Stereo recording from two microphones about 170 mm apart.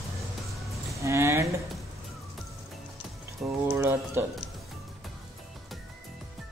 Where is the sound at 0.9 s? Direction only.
15° right (ahead or behind).